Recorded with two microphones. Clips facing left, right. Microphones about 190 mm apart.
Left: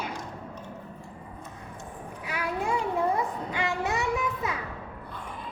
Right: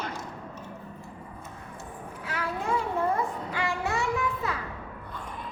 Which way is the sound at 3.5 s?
20° left (ahead or behind).